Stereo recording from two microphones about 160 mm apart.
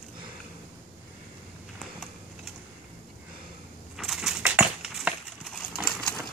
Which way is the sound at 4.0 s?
Centre (ahead or behind).